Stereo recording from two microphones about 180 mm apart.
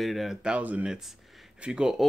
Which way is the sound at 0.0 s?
Centre (ahead or behind).